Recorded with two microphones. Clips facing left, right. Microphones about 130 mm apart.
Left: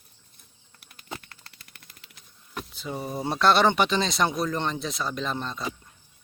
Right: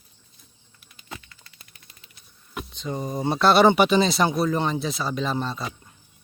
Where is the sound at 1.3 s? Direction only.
65° left (ahead or behind).